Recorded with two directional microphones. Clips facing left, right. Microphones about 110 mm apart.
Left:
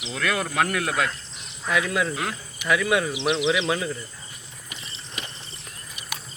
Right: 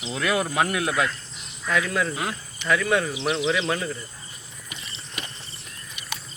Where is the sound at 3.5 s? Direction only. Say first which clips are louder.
Left 1 dB; 5° left (ahead or behind).